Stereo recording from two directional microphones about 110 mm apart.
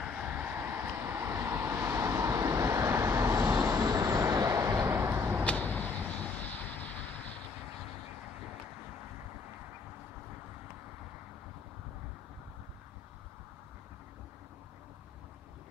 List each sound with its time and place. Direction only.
0.0 s vehicle: 10° right (ahead or behind)
5.4 s vehicle: 15° left (ahead or behind)